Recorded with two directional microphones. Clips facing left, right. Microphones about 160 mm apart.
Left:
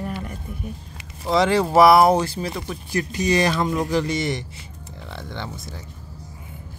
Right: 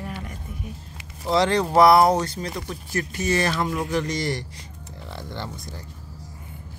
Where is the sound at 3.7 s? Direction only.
35° left (ahead or behind).